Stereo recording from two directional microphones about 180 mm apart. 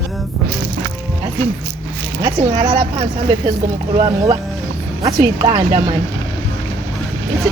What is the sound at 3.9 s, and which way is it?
Speech, 30° right (ahead or behind).